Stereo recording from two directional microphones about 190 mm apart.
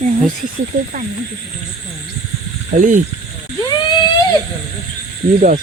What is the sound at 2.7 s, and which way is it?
Speech, 40° right (ahead or behind).